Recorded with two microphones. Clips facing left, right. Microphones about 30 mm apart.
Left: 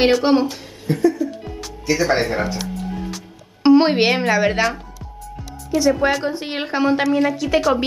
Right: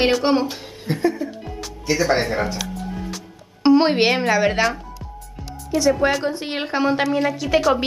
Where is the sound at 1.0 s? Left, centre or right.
Right.